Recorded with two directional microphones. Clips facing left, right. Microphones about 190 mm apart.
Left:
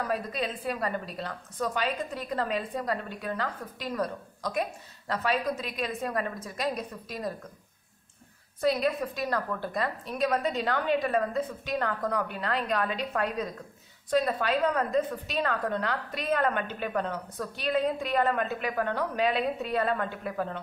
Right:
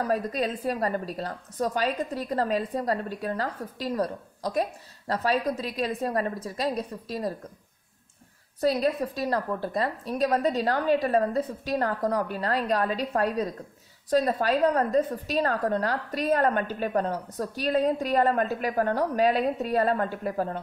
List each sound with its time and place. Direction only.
0.0 s a woman's voice: 40° right (ahead or behind)
8.5 s a woman's voice: 35° right (ahead or behind)